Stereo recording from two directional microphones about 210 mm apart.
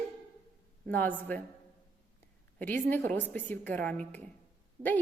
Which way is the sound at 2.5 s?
5° left (ahead or behind).